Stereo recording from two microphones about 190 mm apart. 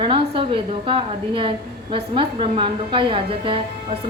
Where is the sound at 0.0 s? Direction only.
25° right (ahead or behind).